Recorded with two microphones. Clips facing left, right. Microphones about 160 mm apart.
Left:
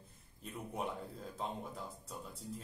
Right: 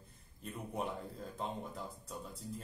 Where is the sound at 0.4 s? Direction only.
Centre (ahead or behind).